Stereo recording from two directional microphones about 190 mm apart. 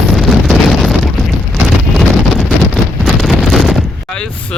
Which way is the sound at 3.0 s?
Centre (ahead or behind).